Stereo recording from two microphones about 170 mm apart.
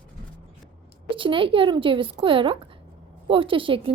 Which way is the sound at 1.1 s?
30° right (ahead or behind).